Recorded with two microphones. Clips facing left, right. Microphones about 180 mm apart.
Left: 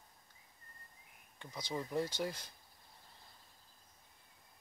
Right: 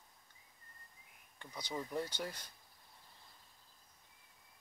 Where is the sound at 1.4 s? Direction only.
10° left (ahead or behind).